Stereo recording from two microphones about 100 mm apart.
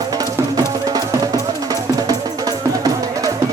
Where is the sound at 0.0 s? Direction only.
40° right (ahead or behind).